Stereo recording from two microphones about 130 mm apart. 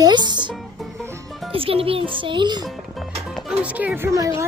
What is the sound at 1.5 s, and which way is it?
A child's voice, 45° right (ahead or behind).